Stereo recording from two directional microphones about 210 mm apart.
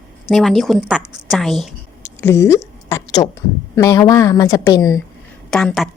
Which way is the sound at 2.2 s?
15° left (ahead or behind).